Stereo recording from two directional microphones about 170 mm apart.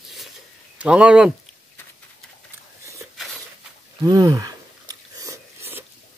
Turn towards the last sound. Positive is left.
turn(degrees=-15)  # may be behind; listen again after turning